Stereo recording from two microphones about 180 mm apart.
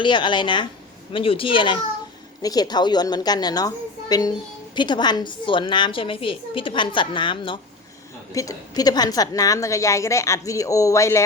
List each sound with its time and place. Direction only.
0.0 s a woman's voice: 25° left (ahead or behind)